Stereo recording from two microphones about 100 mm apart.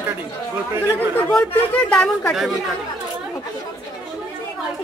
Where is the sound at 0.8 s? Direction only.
20° left (ahead or behind).